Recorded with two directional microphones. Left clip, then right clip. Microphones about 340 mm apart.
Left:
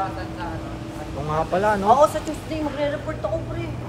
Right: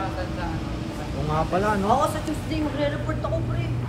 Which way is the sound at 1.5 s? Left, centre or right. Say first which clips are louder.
Left 4 dB; left.